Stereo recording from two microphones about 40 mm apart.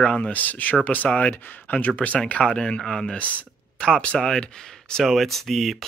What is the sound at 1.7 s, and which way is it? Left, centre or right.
Speech, left.